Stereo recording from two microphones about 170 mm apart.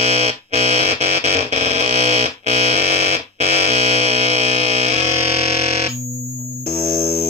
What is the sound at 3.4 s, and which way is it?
Buzzer, 40° right (ahead or behind).